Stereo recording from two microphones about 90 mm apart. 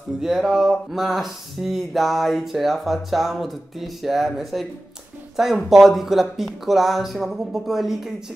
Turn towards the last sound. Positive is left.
turn(degrees=-5)  # may be behind; listen again after turning